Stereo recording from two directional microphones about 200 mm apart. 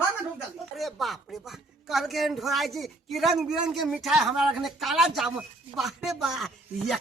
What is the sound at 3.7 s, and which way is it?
Speech, centre (ahead or behind).